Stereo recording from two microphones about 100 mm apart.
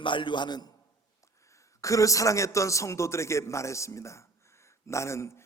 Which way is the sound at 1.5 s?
30° left (ahead or behind).